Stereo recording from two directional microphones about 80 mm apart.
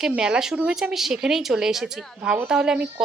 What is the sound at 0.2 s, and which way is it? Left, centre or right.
Speech, centre.